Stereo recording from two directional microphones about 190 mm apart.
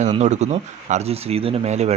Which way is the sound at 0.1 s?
35° right (ahead or behind).